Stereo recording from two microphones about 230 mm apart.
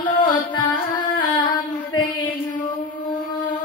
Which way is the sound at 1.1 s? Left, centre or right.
Left.